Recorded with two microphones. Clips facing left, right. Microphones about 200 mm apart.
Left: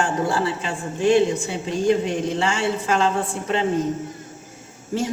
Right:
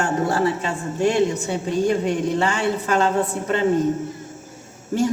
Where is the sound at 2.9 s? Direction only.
40° right (ahead or behind).